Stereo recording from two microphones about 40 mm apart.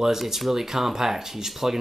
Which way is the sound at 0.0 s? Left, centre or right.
Centre.